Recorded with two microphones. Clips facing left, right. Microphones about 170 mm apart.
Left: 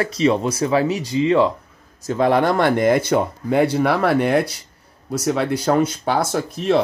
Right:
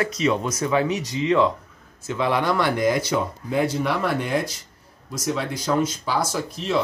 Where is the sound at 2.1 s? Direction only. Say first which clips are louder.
Left 5 dB; 50° left (ahead or behind).